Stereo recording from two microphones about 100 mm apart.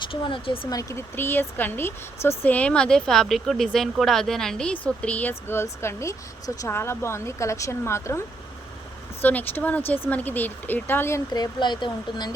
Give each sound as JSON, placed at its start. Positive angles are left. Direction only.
{"t": 0.0, "sound": "speech", "side_deg": 60}
{"t": 0.7, "sound": "speech", "side_deg": 35}
{"t": 5.3, "sound": "speech", "side_deg": 25}
{"t": 9.2, "sound": "speech", "side_deg": 20}
{"t": 11.3, "sound": "speech", "side_deg": 50}